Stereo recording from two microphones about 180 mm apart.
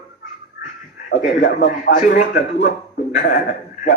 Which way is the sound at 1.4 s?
65° left (ahead or behind).